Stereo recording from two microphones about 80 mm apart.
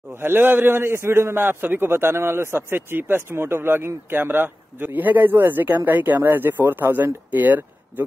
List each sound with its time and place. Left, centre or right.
0.1 s a man's voice: right